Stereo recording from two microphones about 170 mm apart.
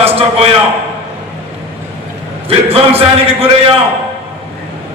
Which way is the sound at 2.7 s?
35° right (ahead or behind).